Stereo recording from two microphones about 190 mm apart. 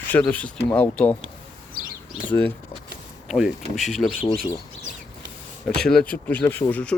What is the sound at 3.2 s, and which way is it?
Speech, centre (ahead or behind).